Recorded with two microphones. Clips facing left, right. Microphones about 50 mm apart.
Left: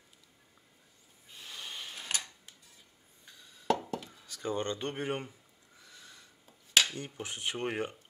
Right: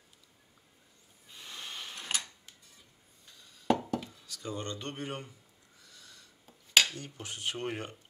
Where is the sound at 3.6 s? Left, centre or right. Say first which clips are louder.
Right 2 dB; centre.